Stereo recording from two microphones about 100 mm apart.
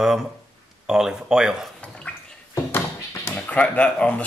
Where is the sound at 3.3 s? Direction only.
15° left (ahead or behind).